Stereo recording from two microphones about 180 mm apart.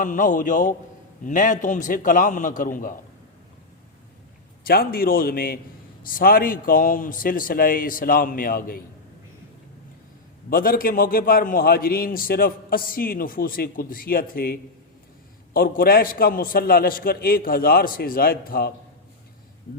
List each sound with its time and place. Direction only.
0.0 s a man's voice: 45° left (ahead or behind)
4.6 s a man's voice: 55° left (ahead or behind)
10.5 s a man's voice: 55° left (ahead or behind)